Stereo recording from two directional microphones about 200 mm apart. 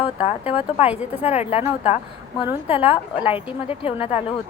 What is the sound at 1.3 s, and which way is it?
Speech, 30° left (ahead or behind).